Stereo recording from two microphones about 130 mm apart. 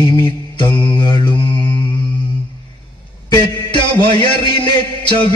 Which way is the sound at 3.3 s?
35° left (ahead or behind).